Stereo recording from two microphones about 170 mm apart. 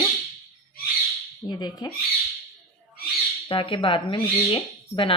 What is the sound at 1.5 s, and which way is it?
Speech, 25° left (ahead or behind).